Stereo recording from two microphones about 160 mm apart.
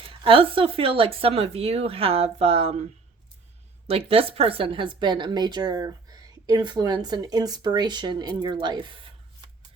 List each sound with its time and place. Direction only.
0.0 s speech: 35° right (ahead or behind)
3.8 s a woman's voice: 35° right (ahead or behind)